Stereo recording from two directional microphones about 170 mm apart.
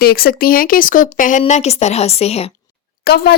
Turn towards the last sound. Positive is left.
turn(degrees=70)  # may be behind; listen again after turning